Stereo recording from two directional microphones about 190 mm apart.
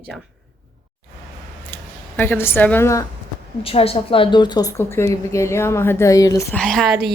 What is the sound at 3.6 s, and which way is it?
A woman's voice, 30° left (ahead or behind).